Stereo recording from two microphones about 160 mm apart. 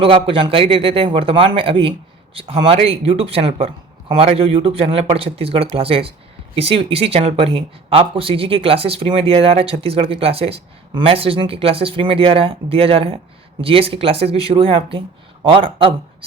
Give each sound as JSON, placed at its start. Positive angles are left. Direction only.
{"t": 0.0, "sound": "speech", "side_deg": -35}